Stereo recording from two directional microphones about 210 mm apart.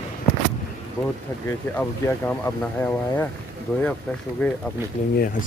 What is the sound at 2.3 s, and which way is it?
Speech, 10° left (ahead or behind).